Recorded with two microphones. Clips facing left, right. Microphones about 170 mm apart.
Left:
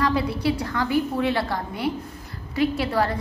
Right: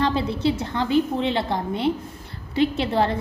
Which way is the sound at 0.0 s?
25° right (ahead or behind).